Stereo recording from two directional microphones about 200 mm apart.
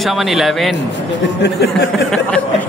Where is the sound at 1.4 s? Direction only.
55° left (ahead or behind).